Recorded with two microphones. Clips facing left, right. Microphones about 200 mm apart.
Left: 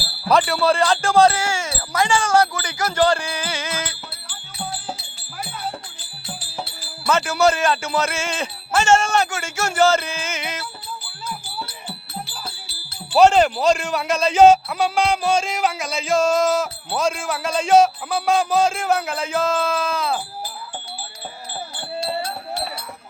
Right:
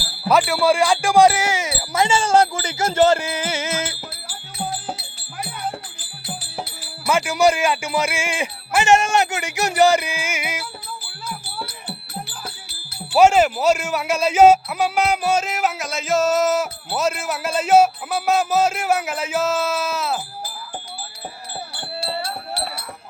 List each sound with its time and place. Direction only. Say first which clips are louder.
0.3 s speech: right 1 dB; 5° right (ahead or behind); by 3.9 s 25° right (ahead or behind)
7.1 s a man's voice: right 1 dB; 15° right (ahead or behind)
13.1 s a man's voice: even; 5° right (ahead or behind)